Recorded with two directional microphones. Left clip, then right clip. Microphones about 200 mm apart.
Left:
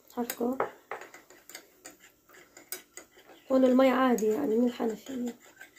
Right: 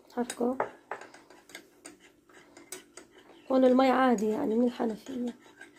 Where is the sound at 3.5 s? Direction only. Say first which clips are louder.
Even; 40° right (ahead or behind).